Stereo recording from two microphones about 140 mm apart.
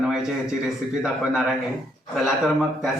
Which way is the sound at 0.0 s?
5° right (ahead or behind).